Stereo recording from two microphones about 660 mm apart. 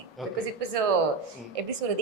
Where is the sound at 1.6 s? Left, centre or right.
Right.